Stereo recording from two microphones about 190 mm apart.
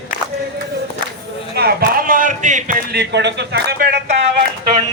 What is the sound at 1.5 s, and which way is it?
A man's voice, 50° right (ahead or behind).